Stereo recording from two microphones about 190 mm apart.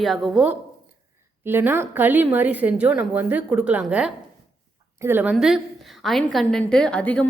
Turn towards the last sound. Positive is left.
turn(degrees=5)  # may be behind; listen again after turning